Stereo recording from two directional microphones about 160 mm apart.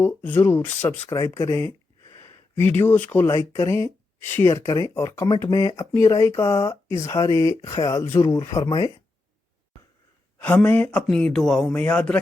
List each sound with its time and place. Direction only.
0.0 s speech: 10° left (ahead or behind)
10.3 s speech: 10° left (ahead or behind)